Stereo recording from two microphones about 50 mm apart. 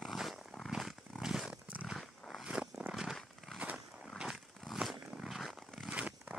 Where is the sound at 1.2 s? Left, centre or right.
Centre.